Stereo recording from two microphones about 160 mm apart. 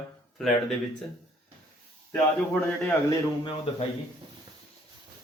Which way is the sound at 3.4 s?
40° left (ahead or behind).